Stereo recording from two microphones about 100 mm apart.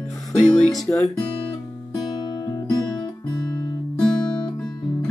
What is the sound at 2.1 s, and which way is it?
Music, 45° left (ahead or behind).